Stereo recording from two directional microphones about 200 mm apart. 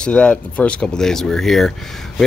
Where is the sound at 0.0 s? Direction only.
5° left (ahead or behind).